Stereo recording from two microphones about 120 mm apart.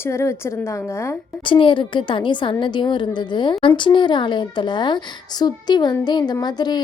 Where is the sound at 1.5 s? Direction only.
45° left (ahead or behind).